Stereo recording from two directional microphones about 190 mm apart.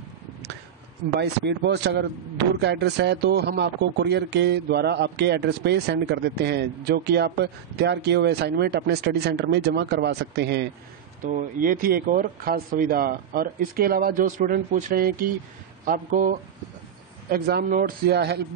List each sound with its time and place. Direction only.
1.2 s a man's voice: 60° right (ahead or behind)
11.2 s speech: 45° right (ahead or behind)
17.3 s a man's voice: 55° right (ahead or behind)